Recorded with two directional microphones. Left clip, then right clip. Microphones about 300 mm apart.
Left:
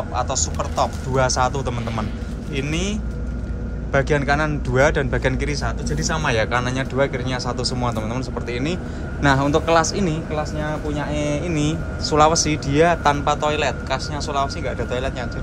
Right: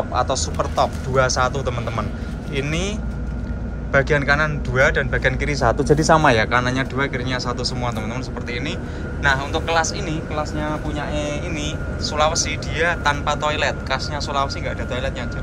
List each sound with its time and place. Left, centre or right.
0.1 s speech: centre
9.2 s a man's voice: left